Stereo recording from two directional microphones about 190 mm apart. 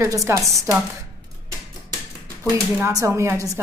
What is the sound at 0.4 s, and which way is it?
Speech, 5° right (ahead or behind).